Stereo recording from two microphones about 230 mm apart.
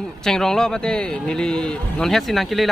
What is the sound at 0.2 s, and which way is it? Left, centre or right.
A man's voice, centre.